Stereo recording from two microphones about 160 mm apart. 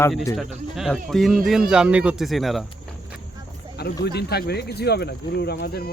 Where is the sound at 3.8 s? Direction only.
85° left.